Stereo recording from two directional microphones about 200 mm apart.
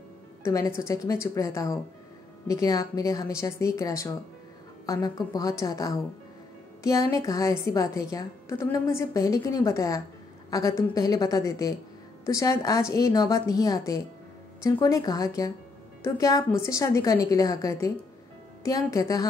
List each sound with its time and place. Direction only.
0.4 s a woman's voice: 15° left (ahead or behind)